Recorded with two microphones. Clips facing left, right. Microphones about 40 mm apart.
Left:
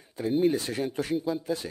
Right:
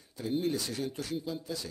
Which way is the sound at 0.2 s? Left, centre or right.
Centre.